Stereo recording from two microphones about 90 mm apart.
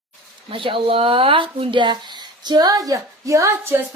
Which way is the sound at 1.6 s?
65° right (ahead or behind).